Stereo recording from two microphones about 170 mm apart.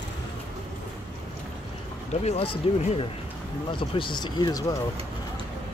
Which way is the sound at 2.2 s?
35° left (ahead or behind).